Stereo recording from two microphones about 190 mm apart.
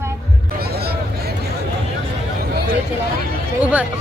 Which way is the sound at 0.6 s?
55° right (ahead or behind).